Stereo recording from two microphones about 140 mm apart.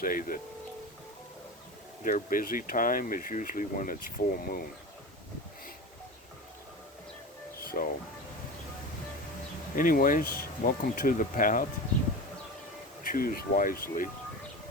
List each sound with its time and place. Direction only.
0.0 s speech: 90° left
2.0 s speech: 75° left (ahead or behind)
7.8 s speech: 65° left (ahead or behind)
9.7 s speech: 85° left
13.0 s speech: 85° left